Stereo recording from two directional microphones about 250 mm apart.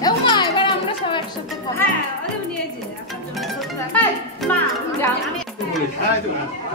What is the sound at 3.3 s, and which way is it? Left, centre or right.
Music, centre.